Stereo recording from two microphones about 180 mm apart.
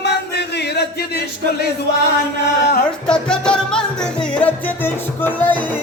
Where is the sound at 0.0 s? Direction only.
70° left (ahead or behind).